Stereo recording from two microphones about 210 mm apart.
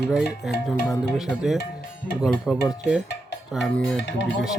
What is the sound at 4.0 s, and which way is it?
Speech, 60° left (ahead or behind).